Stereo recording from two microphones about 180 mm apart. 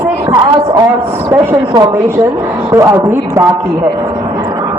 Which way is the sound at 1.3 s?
10° right (ahead or behind).